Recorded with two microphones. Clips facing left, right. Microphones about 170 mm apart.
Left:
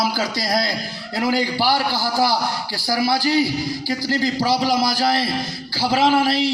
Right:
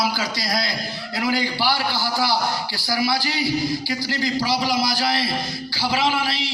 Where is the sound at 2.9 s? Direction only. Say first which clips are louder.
Left 5 dB; 45° left (ahead or behind).